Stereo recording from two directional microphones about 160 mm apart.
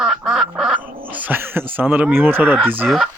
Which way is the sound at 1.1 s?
10° right (ahead or behind).